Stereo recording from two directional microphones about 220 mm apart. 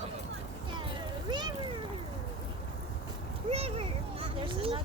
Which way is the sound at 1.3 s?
20° right (ahead or behind).